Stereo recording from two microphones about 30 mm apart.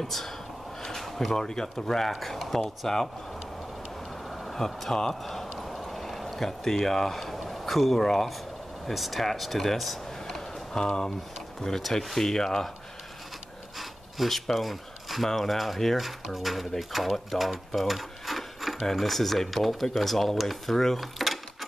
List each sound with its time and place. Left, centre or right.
0.0 s speech: centre
0.8 s a sound: centre
1.3 s speech: centre
4.3 s vehicle: centre
5.2 s a sound: centre
8.0 s speech: centre
8.9 s speech: centre
10.2 s music: centre
11.6 s speech: left
13.7 s pant: centre
14.3 s speech: centre
21.0 s drawer open or close: centre